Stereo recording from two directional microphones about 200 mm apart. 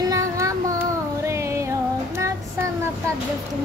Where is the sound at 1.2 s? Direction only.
15° right (ahead or behind).